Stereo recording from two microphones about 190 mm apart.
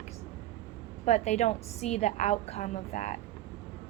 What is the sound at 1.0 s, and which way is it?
A woman's voice, 35° left (ahead or behind).